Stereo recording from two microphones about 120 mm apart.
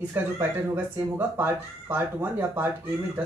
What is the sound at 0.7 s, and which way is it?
Speech, 20° right (ahead or behind).